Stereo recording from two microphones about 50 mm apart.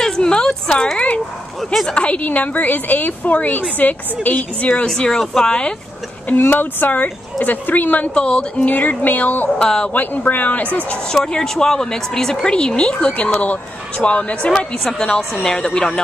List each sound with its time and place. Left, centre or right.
0.0 s a sound: centre
1.7 s speech: centre
2.0 s speech: left
4.8 s speech: centre
6.2 s speech: left
8.1 s speech: left
8.6 s speech: left
9.6 s speech: centre
9.9 s speech: left
11.1 s speech: centre